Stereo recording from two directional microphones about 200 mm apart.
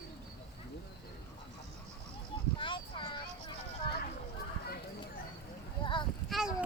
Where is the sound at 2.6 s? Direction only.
25° left (ahead or behind).